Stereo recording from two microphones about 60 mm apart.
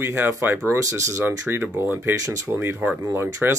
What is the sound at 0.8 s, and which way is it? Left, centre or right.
Speech, right.